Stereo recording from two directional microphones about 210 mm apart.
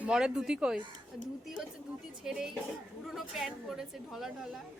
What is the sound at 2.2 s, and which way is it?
Speech, centre (ahead or behind).